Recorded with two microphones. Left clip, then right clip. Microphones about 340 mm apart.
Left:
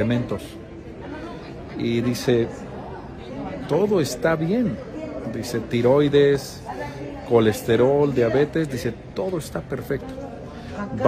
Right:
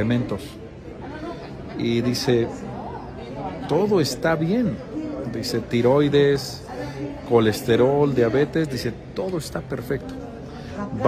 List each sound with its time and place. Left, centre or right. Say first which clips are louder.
0.0 s a man's voice: left 1 dB; centre
1.8 s a man's voice: right 1 dB; centre
3.6 s a man's voice: even; centre